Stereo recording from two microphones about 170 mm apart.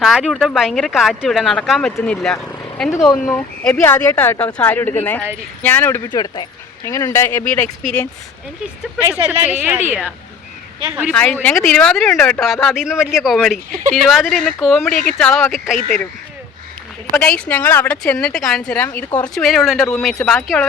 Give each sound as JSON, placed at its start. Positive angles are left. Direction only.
{"t": 0.0, "sound": "speech", "side_deg": 0}
{"t": 6.1, "sound": "speech", "side_deg": 25}
{"t": 8.8, "sound": "speech", "side_deg": -10}
{"t": 11.1, "sound": "speech", "side_deg": 10}
{"t": 17.2, "sound": "speech", "side_deg": 5}